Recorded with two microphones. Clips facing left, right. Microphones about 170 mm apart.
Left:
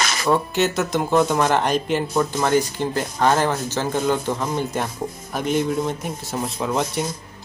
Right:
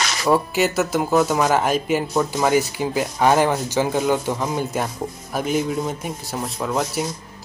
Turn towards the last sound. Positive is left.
turn(degrees=0)  # may be behind; listen again after turning